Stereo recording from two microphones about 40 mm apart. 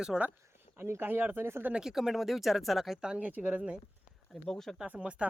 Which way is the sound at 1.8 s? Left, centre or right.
Centre.